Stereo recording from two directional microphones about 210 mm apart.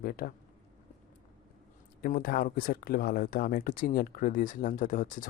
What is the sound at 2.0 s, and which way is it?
Speech, 45° left (ahead or behind).